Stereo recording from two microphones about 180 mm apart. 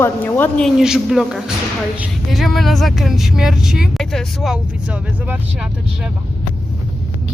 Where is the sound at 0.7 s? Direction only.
5° right (ahead or behind).